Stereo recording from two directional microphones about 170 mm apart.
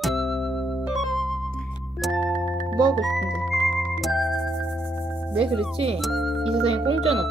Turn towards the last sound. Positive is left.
turn(degrees=-35)  # may be behind; listen again after turning